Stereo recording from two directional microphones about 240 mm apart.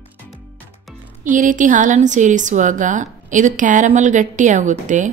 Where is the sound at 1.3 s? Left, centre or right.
Right.